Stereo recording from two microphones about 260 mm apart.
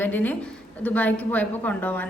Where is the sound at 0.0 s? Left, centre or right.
Centre.